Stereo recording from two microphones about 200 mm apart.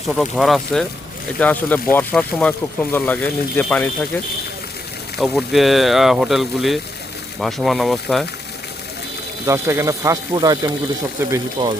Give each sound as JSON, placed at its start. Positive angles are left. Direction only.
{"t": 0.1, "sound": "speech", "side_deg": 0}
{"t": 5.1, "sound": "speech", "side_deg": 0}
{"t": 9.5, "sound": "speech", "side_deg": -15}
{"t": 11.6, "sound": "speech", "side_deg": -25}